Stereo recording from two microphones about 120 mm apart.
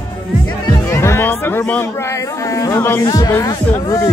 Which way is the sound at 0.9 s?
20° left (ahead or behind).